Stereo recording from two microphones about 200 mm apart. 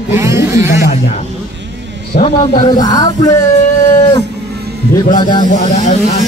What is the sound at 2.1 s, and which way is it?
Speech, 30° left (ahead or behind).